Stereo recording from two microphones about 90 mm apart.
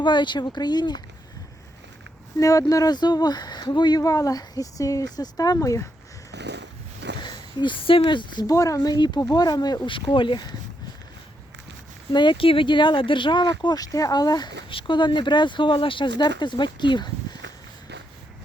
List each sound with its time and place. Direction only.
0.0 s speech: 60° left (ahead or behind)
2.4 s speech: 40° left (ahead or behind)
7.2 s speech: 60° left (ahead or behind)
8.4 s speech: 40° left (ahead or behind)
9.9 s speech: 70° left (ahead or behind)
12.1 s speech: 60° left (ahead or behind)
14.7 s speech: 70° left (ahead or behind)